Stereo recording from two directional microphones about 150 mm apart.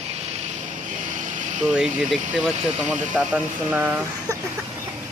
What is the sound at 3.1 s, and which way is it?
Speech, 10° right (ahead or behind).